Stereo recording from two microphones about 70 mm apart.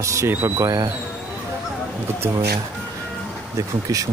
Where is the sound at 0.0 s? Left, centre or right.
Right.